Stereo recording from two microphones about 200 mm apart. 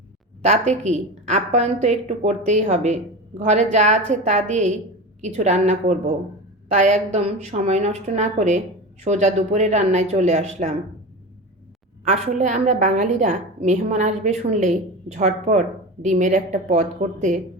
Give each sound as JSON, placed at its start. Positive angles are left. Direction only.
{"t": 0.4, "sound": "a woman's voice", "side_deg": -35}
{"t": 12.0, "sound": "a woman's voice", "side_deg": -35}